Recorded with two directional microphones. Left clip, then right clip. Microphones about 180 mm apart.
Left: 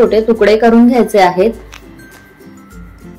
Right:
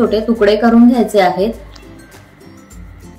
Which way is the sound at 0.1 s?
25° left (ahead or behind).